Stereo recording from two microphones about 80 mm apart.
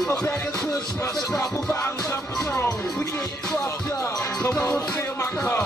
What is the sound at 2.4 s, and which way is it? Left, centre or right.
Music, left.